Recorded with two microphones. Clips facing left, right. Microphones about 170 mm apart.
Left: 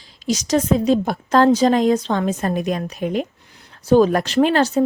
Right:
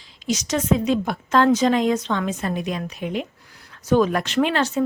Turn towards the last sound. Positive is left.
turn(degrees=40)  # may be behind; listen again after turning